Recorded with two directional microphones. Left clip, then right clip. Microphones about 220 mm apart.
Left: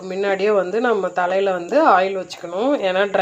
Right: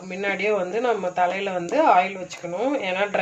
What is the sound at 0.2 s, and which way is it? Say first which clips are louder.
Speech: left 5 dB; 30° left (ahead or behind).